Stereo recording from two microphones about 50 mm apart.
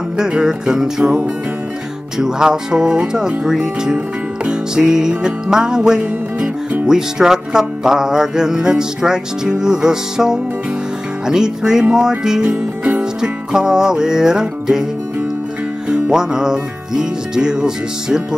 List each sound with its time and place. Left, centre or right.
0.2 s music: centre
2.1 s music: centre
6.4 s music: right
6.9 s music: centre
15.9 s music: centre